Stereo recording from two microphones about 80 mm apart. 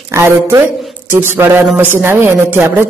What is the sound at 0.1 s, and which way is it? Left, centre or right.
A man's voice, right.